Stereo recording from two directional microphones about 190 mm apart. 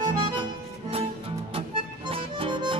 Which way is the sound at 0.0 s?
25° right (ahead or behind).